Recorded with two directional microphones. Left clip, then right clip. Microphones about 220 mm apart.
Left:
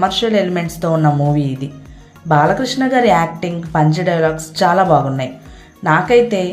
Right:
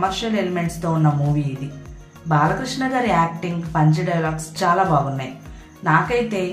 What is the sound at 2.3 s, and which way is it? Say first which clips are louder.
A woman's voice: left 6 dB; 25° left (ahead or behind).